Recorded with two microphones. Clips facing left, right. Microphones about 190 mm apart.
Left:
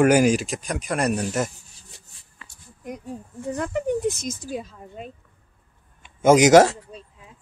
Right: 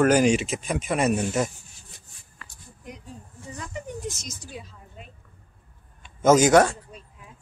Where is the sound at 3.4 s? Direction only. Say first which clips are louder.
Left 12 dB; 60° left (ahead or behind).